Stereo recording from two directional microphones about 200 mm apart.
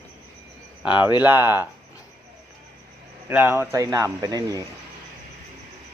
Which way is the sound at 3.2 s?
10° right (ahead or behind).